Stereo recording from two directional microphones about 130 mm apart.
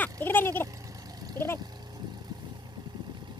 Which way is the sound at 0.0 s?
15° left (ahead or behind).